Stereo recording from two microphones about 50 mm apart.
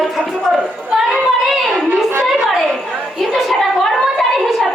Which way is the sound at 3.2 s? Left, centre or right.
Centre.